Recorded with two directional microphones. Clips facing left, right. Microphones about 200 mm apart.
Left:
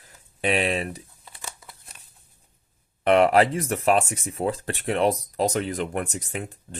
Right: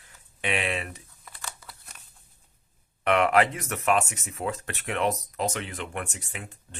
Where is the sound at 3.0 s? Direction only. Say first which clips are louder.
Left 4 dB; 30° left (ahead or behind).